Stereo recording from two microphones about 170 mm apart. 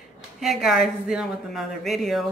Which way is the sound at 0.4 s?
Centre (ahead or behind).